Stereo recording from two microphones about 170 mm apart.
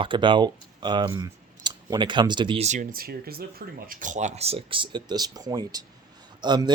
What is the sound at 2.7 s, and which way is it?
Speech, 50° right (ahead or behind).